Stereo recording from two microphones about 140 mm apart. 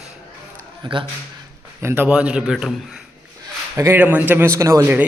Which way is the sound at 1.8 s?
15° right (ahead or behind).